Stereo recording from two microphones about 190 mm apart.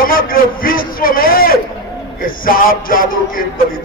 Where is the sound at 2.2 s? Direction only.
50° left (ahead or behind).